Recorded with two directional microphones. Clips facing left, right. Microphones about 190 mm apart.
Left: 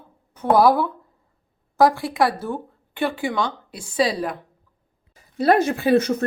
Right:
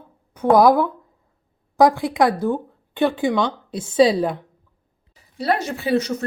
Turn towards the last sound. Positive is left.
turn(degrees=55)  # may be behind; listen again after turning